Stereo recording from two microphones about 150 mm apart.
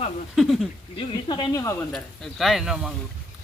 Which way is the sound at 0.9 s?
30° left (ahead or behind).